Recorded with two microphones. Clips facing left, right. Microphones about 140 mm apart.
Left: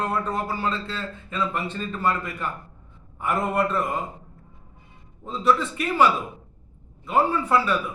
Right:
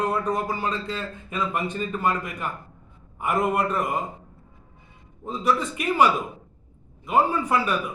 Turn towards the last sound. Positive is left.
turn(degrees=-15)  # may be behind; listen again after turning